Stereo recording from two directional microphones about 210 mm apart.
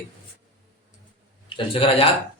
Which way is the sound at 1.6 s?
25° left (ahead or behind).